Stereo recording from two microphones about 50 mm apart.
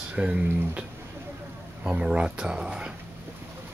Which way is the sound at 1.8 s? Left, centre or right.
Centre.